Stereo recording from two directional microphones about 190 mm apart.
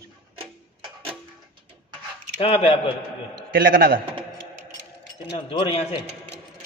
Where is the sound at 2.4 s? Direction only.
30° left (ahead or behind).